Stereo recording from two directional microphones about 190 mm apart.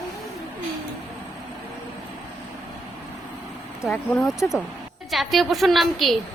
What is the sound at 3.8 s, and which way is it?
Speech, centre (ahead or behind).